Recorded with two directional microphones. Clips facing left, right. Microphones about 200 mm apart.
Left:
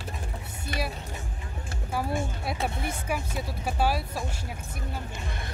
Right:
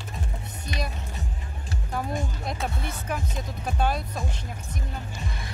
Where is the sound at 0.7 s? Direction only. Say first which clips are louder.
Left 1 dB; 50° left (ahead or behind).